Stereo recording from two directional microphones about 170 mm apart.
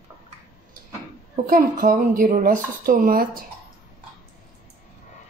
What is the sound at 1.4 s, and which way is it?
Speech, 55° right (ahead or behind).